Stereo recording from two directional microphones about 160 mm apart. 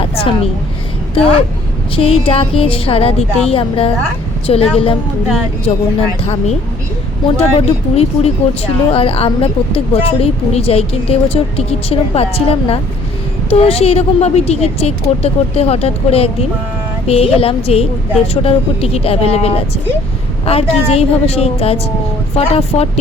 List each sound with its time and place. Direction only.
0.0 s a sound: 35° left (ahead or behind)
1.1 s speech: 35° left (ahead or behind)
7.3 s speech: 40° left (ahead or behind)